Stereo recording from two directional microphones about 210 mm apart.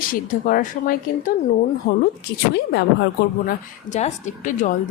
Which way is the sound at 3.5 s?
35° left (ahead or behind).